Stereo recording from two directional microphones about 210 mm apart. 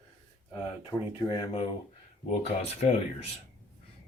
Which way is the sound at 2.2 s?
30° left (ahead or behind).